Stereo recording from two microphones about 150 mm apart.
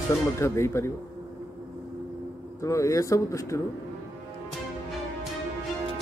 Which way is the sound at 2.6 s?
20° left (ahead or behind).